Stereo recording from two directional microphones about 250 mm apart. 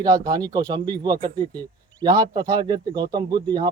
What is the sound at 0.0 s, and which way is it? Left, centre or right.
Speech, centre.